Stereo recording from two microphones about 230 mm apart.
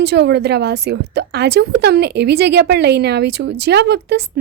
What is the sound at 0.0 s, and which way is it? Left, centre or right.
A woman's voice, right.